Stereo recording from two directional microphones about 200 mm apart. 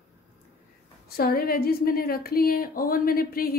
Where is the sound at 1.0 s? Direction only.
50° left (ahead or behind).